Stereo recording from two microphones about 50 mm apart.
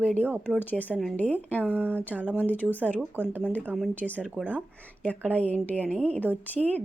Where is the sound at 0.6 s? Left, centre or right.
Left.